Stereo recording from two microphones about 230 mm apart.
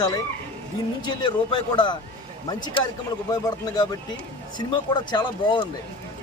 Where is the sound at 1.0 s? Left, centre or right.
Centre.